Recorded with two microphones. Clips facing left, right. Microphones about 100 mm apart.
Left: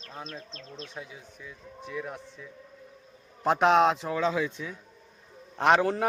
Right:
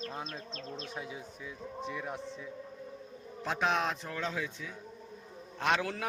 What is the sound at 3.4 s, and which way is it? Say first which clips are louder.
Speech: left 10 dB; 55° left (ahead or behind).